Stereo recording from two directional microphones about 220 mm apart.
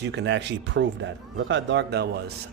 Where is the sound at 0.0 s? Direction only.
50° right (ahead or behind).